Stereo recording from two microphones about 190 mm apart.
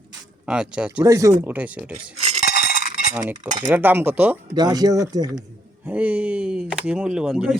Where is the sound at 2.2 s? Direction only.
35° right (ahead or behind).